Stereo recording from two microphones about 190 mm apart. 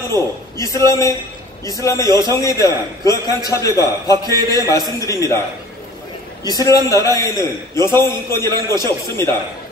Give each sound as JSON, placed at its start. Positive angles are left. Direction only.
{"t": 0.1, "sound": "a man's voice", "side_deg": 15}
{"t": 4.1, "sound": "a man's voice", "side_deg": -20}
{"t": 5.0, "sound": "a man's voice", "side_deg": 15}
{"t": 6.4, "sound": "a man's voice", "side_deg": 20}